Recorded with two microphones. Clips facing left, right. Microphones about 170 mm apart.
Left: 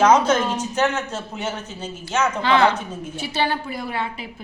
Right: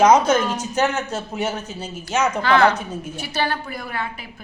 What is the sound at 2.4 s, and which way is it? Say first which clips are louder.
A woman's voice: right 1 dB; 25° left (ahead or behind).